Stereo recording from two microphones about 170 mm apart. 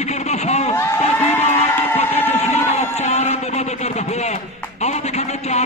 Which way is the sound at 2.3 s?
40° left (ahead or behind).